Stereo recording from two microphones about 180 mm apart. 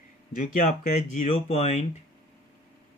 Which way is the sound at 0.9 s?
40° left (ahead or behind).